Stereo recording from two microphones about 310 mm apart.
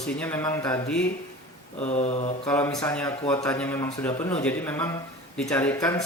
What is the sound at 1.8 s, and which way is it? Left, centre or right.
Mantra, left.